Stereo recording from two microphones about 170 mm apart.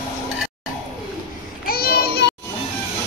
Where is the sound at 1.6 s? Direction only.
60° left (ahead or behind).